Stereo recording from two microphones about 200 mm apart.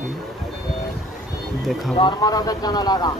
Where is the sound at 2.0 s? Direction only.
20° left (ahead or behind).